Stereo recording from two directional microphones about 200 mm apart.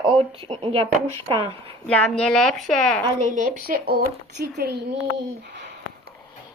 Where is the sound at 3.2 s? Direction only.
40° right (ahead or behind).